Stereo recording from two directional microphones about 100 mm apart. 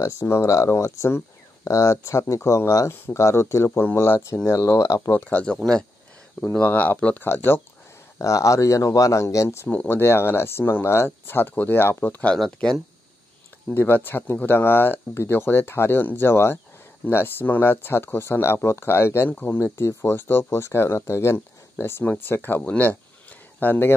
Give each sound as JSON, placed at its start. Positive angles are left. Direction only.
{"t": 0.0, "sound": "speech", "side_deg": 30}
{"t": 5.1, "sound": "speech", "side_deg": 20}
{"t": 6.6, "sound": "speech", "side_deg": 20}
{"t": 9.7, "sound": "speech", "side_deg": 20}
{"t": 13.7, "sound": "speech", "side_deg": 20}